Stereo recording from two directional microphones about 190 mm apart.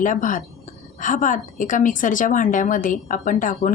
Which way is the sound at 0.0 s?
45° left (ahead or behind).